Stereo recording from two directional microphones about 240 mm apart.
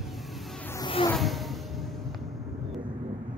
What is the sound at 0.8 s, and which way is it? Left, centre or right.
Insect, left.